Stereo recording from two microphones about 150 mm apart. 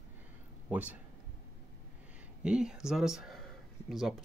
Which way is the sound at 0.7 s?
10° right (ahead or behind).